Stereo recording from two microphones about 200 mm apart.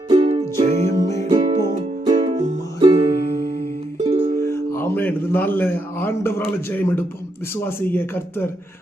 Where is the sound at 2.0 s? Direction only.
20° right (ahead or behind).